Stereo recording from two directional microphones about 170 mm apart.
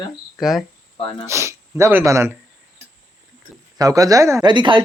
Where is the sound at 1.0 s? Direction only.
30° left (ahead or behind).